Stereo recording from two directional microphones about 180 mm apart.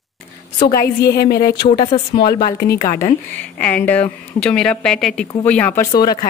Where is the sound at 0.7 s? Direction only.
60° left (ahead or behind); by 3.2 s 45° left (ahead or behind).